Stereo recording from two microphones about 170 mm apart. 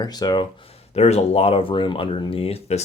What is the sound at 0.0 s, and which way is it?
Speech, 25° left (ahead or behind).